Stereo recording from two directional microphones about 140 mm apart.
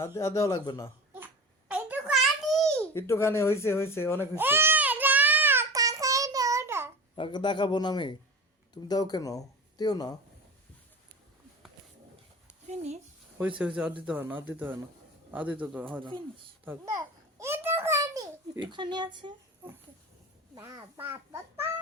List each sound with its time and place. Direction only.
0.0 s speech: 20° left (ahead or behind)
1.1 s babbling: 10° right (ahead or behind)
2.9 s speech: 20° left (ahead or behind)
4.4 s child singing: 15° right (ahead or behind)
7.2 s a man's voice: 35° left (ahead or behind)
12.6 s speech: 55° right (ahead or behind)
13.6 s a man's voice: 10° right (ahead or behind)
16.0 s speech: 35° right (ahead or behind)
16.6 s a sound: 20° right (ahead or behind)
20.6 s speech: 20° right (ahead or behind)